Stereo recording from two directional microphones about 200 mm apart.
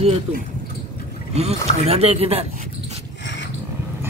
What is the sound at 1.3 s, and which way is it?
Speech, 30° right (ahead or behind).